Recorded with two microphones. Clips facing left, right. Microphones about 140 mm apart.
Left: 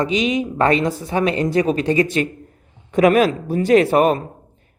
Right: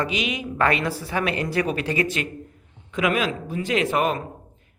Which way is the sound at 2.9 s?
40° left (ahead or behind).